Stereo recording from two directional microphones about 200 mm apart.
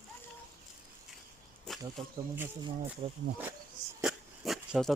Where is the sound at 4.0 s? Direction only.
Centre (ahead or behind).